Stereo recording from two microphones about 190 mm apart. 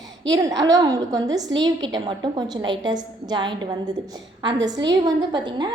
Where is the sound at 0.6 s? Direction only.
20° right (ahead or behind).